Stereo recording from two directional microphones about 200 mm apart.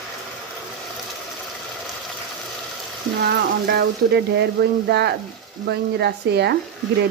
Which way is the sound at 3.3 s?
55° right (ahead or behind).